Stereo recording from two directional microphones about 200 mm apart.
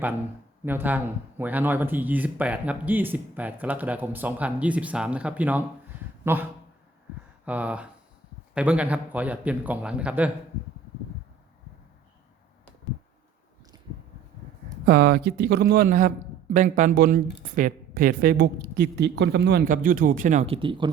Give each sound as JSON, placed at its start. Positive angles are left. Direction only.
{"t": 0.6, "sound": "speech", "side_deg": -10}
{"t": 14.8, "sound": "a woman's voice", "side_deg": -50}